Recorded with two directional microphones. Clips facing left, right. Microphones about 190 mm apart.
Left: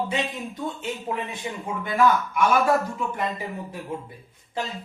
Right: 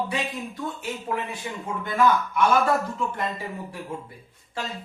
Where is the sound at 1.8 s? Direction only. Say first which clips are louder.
Left 1 dB; 10° left (ahead or behind).